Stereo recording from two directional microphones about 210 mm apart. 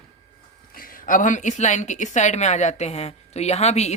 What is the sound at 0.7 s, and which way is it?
Speech, 40° left (ahead or behind).